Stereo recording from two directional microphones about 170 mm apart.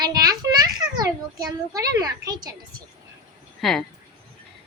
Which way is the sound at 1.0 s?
20° right (ahead or behind).